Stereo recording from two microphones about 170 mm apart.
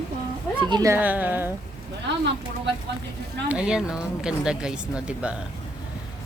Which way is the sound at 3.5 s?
5° right (ahead or behind).